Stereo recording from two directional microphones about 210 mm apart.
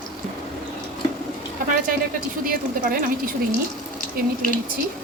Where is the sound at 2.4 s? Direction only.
45° right (ahead or behind).